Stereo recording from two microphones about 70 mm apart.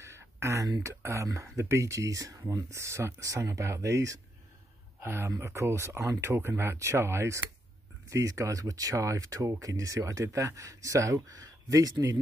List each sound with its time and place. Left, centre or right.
0.0 s a sound: right
0.8 s speech: right
2.7 s speech: right
5.0 s speech: right
8.1 s speech: right